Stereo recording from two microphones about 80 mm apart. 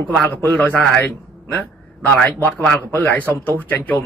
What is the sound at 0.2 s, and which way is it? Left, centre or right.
Speech, left.